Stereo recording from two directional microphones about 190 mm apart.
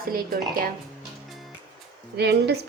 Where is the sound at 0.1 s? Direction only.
50° right (ahead or behind).